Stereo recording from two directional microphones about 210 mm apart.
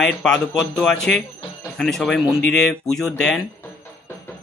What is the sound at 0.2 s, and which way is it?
Speech, 5° left (ahead or behind).